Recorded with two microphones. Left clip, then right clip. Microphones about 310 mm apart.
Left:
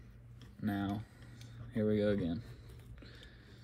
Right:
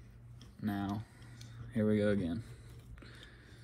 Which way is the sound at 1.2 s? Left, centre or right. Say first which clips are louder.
Right 1 dB; centre.